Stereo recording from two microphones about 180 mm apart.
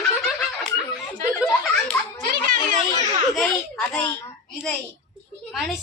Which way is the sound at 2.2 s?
50° right (ahead or behind).